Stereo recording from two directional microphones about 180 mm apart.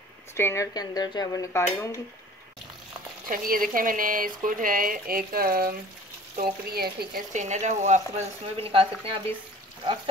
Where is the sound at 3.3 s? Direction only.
50° right (ahead or behind).